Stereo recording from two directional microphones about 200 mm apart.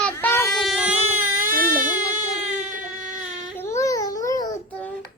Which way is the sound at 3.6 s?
15° left (ahead or behind).